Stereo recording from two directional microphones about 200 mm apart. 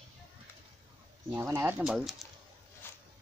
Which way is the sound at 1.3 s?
15° right (ahead or behind).